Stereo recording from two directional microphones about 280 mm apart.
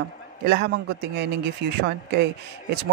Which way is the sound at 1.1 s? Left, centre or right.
Right.